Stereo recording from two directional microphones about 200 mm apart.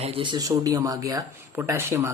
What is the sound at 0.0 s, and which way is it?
Speech, 25° right (ahead or behind).